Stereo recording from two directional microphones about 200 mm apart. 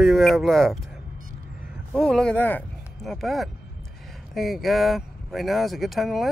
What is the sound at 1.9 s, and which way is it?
Speech, 5° left (ahead or behind).